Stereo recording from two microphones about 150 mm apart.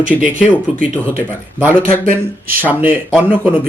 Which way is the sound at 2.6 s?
10° right (ahead or behind).